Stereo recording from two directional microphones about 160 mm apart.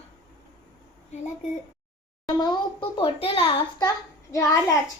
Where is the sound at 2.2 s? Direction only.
25° left (ahead or behind).